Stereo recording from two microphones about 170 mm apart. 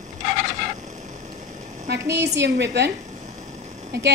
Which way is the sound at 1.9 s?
80° right.